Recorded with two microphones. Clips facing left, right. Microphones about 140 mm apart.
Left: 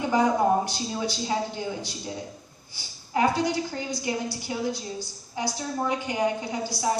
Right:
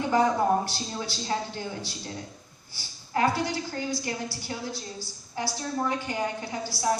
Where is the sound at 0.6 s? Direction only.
15° left (ahead or behind).